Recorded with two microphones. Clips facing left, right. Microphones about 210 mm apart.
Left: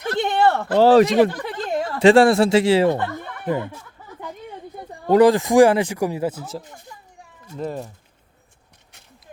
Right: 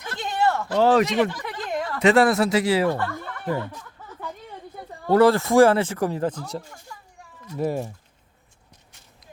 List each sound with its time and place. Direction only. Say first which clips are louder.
0.2 s a sound: left 4 dB; 65° left (ahead or behind)
0.8 s speech: left 6 dB; 35° left (ahead or behind); by 3.8 s 15° left (ahead or behind)
5.0 s speech: left 3 dB; 15° left (ahead or behind)
6.6 s speech: left 1 dB; 20° left (ahead or behind)
7.5 s speech: right 3 dB; 10° right (ahead or behind)